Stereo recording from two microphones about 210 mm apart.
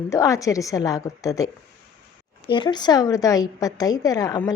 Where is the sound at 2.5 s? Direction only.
20° left (ahead or behind).